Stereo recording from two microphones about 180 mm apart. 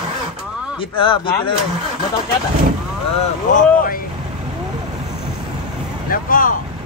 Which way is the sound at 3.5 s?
50° left (ahead or behind).